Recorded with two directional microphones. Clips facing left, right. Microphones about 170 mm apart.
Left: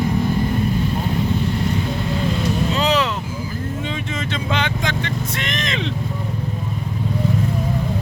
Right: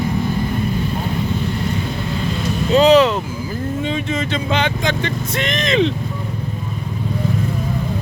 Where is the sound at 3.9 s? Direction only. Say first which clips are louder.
Right 5 dB; 25° right (ahead or behind).